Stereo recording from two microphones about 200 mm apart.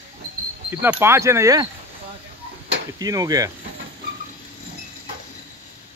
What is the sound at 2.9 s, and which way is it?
Speech, 20° right (ahead or behind).